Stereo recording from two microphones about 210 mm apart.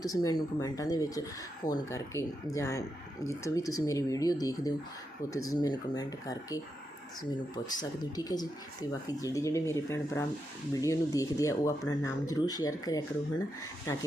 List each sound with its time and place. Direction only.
0.0 s speech: 15° left (ahead or behind)